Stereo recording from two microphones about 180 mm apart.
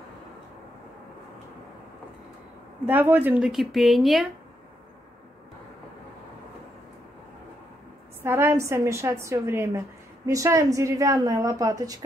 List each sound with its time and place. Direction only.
2.8 s a woman's voice: 10° right (ahead or behind)
8.2 s a woman's voice: 15° right (ahead or behind)